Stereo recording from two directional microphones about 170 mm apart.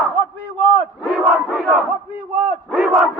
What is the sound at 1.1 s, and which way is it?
Crowd, centre (ahead or behind).